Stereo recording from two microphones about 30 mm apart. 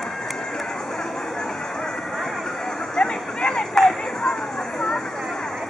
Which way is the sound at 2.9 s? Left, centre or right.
Left.